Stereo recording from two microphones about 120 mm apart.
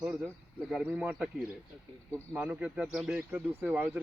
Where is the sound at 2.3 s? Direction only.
15° right (ahead or behind).